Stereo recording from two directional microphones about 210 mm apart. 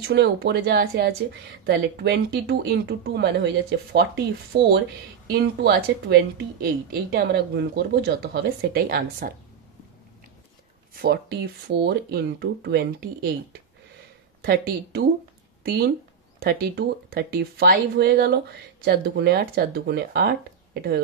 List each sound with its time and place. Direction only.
0.0 s speech: 55° right (ahead or behind)
4.5 s speech: 50° right (ahead or behind)
11.0 s speech: 50° right (ahead or behind)
16.3 s speech: 50° right (ahead or behind)